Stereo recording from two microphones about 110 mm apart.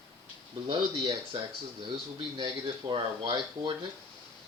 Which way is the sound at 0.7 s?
50° right (ahead or behind).